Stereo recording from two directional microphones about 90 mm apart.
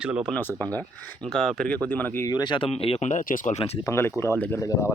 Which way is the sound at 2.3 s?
50° left (ahead or behind).